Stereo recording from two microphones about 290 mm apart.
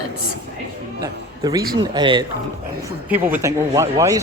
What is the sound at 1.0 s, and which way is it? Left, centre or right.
A man's voice, centre.